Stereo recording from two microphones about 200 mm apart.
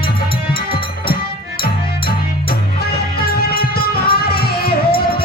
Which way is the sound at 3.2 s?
50° left (ahead or behind).